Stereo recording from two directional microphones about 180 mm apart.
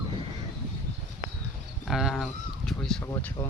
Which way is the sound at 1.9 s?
Centre (ahead or behind).